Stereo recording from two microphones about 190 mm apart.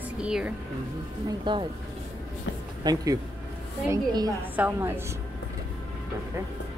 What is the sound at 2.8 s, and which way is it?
A woman's voice, 20° right (ahead or behind).